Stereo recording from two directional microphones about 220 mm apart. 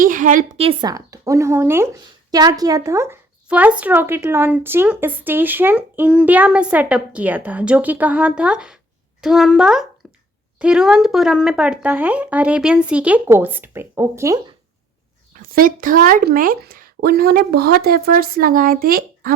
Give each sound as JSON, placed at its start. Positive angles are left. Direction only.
{"t": 0.0, "sound": "a woman's voice", "side_deg": -35}
{"t": 10.0, "sound": "a sound", "side_deg": 0}
{"t": 10.6, "sound": "speech", "side_deg": -5}
{"t": 15.3, "sound": "speech", "side_deg": -40}